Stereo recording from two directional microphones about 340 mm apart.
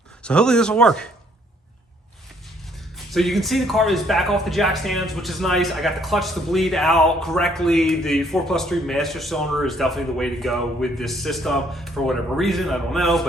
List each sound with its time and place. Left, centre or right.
0.2 s speech: centre
3.1 s speech: centre